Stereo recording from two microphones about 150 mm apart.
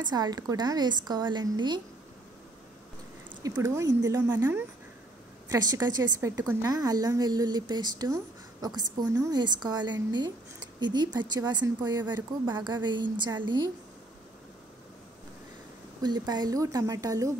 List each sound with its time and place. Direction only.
0.0 s a woman's voice: 25° right (ahead or behind)
3.5 s speech: 20° right (ahead or behind)
5.5 s a woman's voice: 25° right (ahead or behind)
16.0 s a woman's voice: 30° right (ahead or behind)